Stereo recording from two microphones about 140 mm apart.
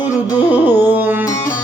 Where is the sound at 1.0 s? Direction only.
15° right (ahead or behind).